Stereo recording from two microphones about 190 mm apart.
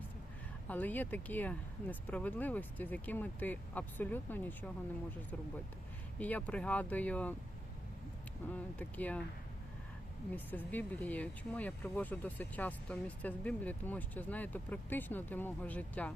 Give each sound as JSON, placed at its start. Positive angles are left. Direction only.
{"t": 0.7, "sound": "speech", "side_deg": 10}
{"t": 6.1, "sound": "speech", "side_deg": 10}
{"t": 8.4, "sound": "speech", "side_deg": 10}
{"t": 10.3, "sound": "speech", "side_deg": 10}